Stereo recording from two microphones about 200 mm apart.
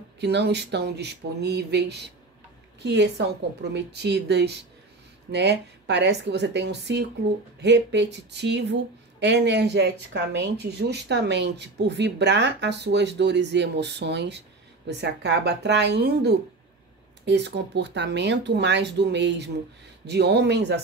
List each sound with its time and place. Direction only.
0.2 s speech: 60° right (ahead or behind)